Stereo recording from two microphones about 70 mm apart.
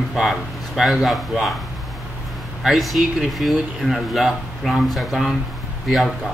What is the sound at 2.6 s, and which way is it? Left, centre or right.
Speech, centre.